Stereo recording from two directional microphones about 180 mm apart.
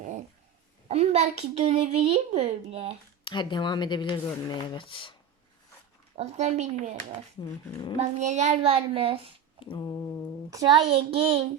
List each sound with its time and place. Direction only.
0.0 s dog: 40° right (ahead or behind)
0.9 s a child's voice: 35° right (ahead or behind)
3.2 s speech: 25° left (ahead or behind)
6.1 s a child's voice: 40° right (ahead or behind)
7.7 s speech: 25° left (ahead or behind)
7.9 s a child's voice: 40° right (ahead or behind)
9.6 s speech: 30° left (ahead or behind)
10.8 s a child's voice: 30° right (ahead or behind)